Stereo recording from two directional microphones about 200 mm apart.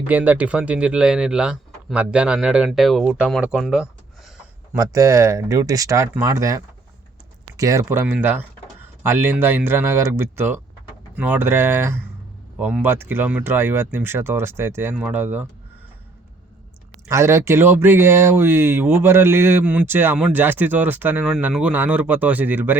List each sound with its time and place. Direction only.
0.1 s speech: 10° right (ahead or behind)
4.7 s speech: 15° right (ahead or behind)
17.1 s speech: 15° right (ahead or behind)